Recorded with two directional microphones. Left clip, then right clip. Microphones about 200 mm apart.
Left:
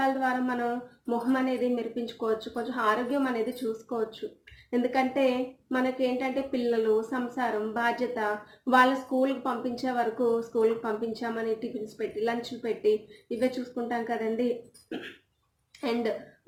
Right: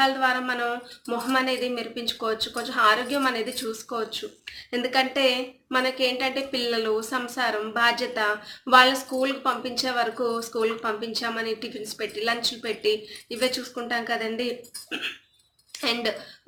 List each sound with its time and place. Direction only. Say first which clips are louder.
0.0 s a woman's voice: right 5 dB; 20° right (ahead or behind)
4.7 s a woman's voice: right 3 dB; 15° right (ahead or behind)
15.8 s speech: right 3 dB; 15° right (ahead or behind)